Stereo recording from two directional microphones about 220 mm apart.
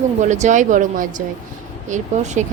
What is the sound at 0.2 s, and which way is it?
A woman's voice, 35° right (ahead or behind).